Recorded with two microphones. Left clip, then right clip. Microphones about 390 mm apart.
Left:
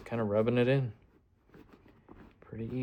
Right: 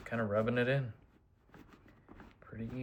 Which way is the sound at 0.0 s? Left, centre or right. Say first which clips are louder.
Left 4 dB; centre.